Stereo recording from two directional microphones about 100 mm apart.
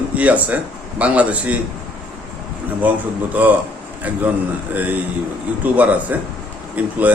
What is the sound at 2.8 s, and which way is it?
Speech, 15° right (ahead or behind).